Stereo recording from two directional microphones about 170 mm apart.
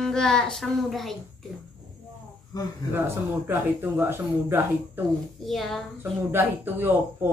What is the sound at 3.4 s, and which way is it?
A woman's voice, 15° right (ahead or behind).